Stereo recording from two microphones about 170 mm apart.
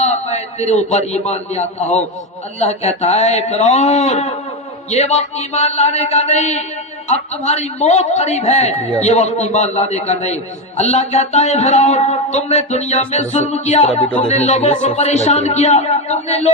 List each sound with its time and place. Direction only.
0.0 s a man's voice: 40° left (ahead or behind)
13.9 s speech: 5° left (ahead or behind)
14.3 s a man's voice: 40° left (ahead or behind)